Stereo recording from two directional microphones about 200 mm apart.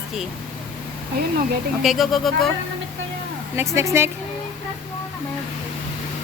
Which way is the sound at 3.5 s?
15° right (ahead or behind).